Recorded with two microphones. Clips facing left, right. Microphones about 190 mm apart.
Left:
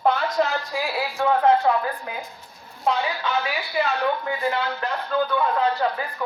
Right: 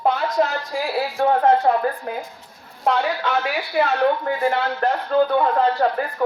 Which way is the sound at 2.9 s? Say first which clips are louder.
Right 3 dB; 65° right (ahead or behind).